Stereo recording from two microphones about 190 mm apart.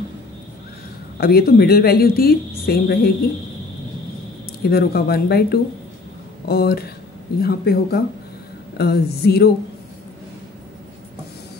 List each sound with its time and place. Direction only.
1.1 s a woman's voice: 55° left (ahead or behind)
4.6 s a woman's voice: 55° left (ahead or behind)